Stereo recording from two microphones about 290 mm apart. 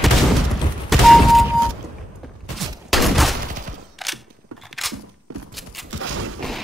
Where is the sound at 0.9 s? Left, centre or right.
Centre.